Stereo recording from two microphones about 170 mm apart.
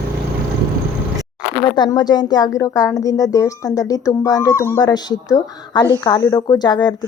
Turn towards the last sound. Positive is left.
turn(degrees=25)  # may be behind; listen again after turning